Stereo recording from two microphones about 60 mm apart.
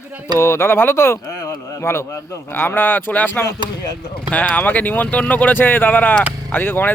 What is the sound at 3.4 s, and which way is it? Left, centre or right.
Speech, left.